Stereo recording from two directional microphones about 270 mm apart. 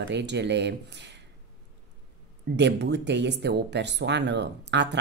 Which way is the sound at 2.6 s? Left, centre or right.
Right.